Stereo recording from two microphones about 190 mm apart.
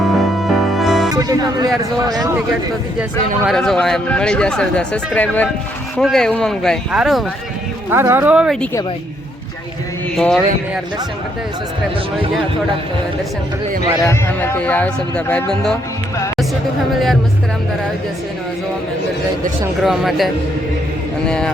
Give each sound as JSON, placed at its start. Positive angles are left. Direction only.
{"t": 0.1, "sound": "music", "side_deg": 0}
{"t": 1.1, "sound": "music", "side_deg": -20}
{"t": 2.0, "sound": "speech", "side_deg": -20}
{"t": 3.4, "sound": "speech", "side_deg": 0}
{"t": 7.9, "sound": "speech", "side_deg": -10}
{"t": 10.2, "sound": "speech", "side_deg": 0}
{"t": 14.0, "sound": "speech", "side_deg": 15}
{"t": 16.9, "sound": "speech", "side_deg": 0}
{"t": 19.8, "sound": "speech", "side_deg": 0}